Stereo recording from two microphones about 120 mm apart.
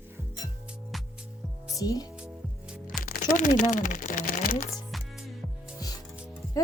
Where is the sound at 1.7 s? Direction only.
30° left (ahead or behind).